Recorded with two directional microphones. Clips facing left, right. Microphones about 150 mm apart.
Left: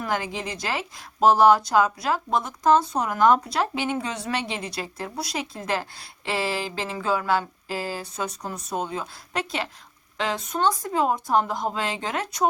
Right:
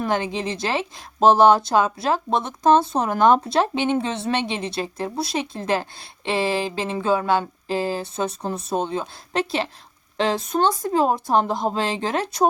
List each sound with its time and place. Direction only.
0.0 s speech: 25° right (ahead or behind)